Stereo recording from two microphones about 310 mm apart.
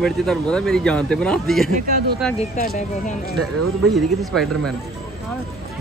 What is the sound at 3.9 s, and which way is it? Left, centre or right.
Speech, centre.